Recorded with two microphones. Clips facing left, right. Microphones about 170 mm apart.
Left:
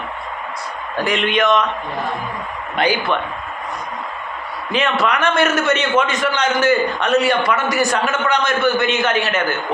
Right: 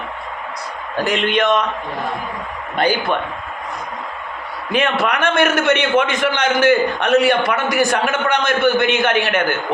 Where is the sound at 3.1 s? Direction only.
45° right (ahead or behind).